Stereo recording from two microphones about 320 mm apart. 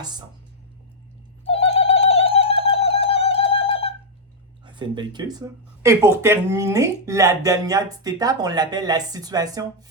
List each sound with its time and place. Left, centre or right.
1.5 s music: centre
4.6 s speech: centre